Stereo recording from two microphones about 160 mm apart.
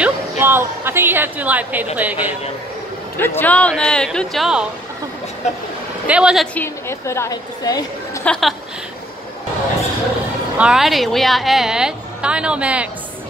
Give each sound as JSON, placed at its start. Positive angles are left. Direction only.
{"t": 0.0, "sound": "a woman's voice", "side_deg": -15}
{"t": 3.2, "sound": "a woman's voice", "side_deg": 15}
{"t": 5.4, "sound": "speech", "side_deg": 45}
{"t": 6.0, "sound": "a woman's voice", "side_deg": -5}
{"t": 6.5, "sound": "a woman's voice", "side_deg": 15}
{"t": 8.2, "sound": "speech", "side_deg": 5}
{"t": 10.6, "sound": "a woman's voice", "side_deg": -5}